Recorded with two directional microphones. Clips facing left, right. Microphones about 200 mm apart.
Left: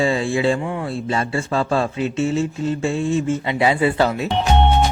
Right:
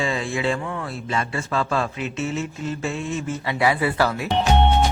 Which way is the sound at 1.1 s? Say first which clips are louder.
Left 3 dB; 30° left (ahead or behind).